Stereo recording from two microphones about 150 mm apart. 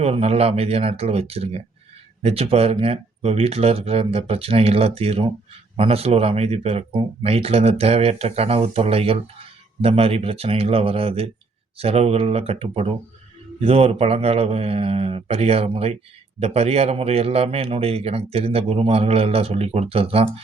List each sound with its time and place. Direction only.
0.0 s speech: 40° right (ahead or behind)